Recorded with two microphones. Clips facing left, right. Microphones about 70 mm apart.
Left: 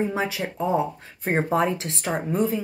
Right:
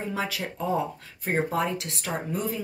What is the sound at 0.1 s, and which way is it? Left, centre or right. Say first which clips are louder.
A woman's voice: left 4 dB; left.